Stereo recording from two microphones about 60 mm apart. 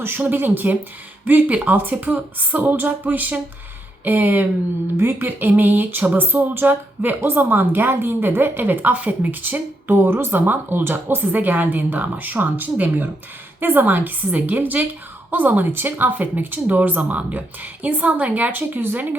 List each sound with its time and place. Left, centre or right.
0.0 s a woman's voice: right